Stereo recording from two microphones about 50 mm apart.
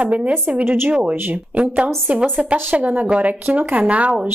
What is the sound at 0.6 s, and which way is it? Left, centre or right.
Speech, right.